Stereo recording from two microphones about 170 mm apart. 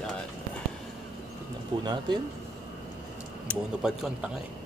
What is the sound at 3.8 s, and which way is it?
Speech, 5° right (ahead or behind).